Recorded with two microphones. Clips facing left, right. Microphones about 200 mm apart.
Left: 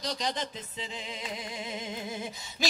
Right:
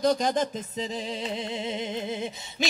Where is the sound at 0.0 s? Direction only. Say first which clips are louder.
Right 10 dB; 50° right (ahead or behind).